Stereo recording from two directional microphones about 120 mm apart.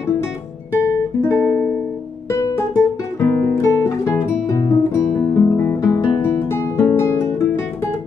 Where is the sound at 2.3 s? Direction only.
25° left (ahead or behind).